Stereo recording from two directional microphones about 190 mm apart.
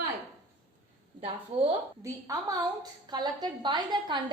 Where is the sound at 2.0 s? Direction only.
15° right (ahead or behind).